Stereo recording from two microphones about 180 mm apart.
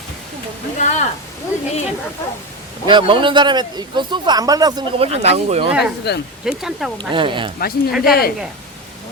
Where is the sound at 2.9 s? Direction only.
25° right (ahead or behind).